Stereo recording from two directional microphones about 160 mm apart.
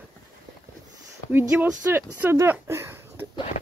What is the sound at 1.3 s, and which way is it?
Speech, 10° right (ahead or behind).